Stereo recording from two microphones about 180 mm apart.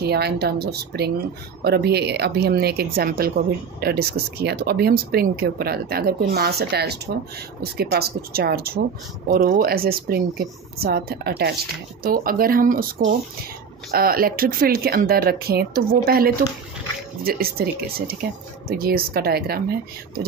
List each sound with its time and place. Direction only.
0.0 s speech: 65° right (ahead or behind)
13.9 s speech: 55° right (ahead or behind)